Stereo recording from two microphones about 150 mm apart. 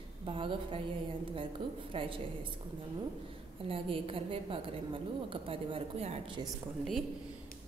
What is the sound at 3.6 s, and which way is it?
A woman's voice, 35° right (ahead or behind).